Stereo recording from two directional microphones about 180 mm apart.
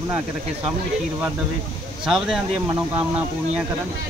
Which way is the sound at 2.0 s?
5° right (ahead or behind).